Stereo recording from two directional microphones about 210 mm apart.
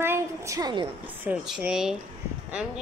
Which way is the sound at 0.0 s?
10° right (ahead or behind).